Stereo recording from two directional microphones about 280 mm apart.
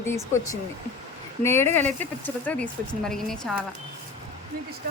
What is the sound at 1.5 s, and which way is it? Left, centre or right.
Speech, centre.